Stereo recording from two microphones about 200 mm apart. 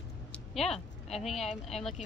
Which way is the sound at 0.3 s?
Centre (ahead or behind).